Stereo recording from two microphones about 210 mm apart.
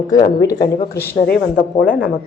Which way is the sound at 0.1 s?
15° left (ahead or behind).